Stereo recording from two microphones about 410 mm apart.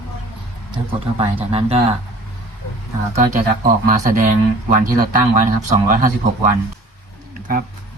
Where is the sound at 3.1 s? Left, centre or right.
Centre.